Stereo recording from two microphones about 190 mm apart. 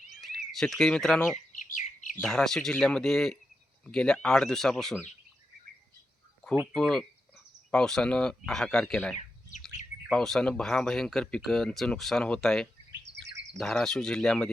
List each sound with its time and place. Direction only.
0.1 s speech: centre (ahead or behind)
1.5 s chirp: 40° left (ahead or behind)
2.1 s speech: centre (ahead or behind)
6.7 s speech: 5° left (ahead or behind)
13.1 s chirp: 65° right (ahead or behind)
13.6 s speech: 5° left (ahead or behind)